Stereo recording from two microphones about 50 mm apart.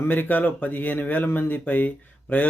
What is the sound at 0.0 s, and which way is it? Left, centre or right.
Speech, left.